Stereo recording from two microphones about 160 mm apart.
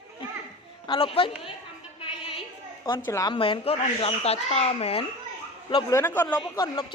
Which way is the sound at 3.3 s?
35° left (ahead or behind).